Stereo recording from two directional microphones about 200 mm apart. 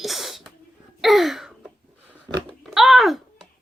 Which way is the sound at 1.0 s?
Centre (ahead or behind).